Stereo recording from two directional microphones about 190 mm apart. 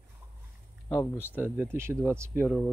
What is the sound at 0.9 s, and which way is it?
Speech, 15° left (ahead or behind).